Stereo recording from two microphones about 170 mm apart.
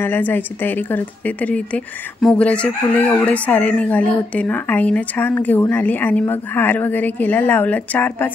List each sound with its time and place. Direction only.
0.0 s speech: 10° left (ahead or behind)